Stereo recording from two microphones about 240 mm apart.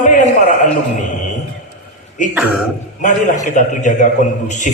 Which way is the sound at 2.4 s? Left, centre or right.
Centre.